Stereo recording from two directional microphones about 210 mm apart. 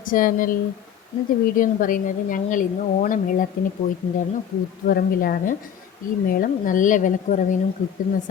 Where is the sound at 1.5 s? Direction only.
40° left (ahead or behind).